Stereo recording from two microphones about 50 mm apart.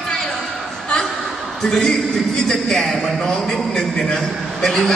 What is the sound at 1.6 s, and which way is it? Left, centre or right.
A man's voice, centre.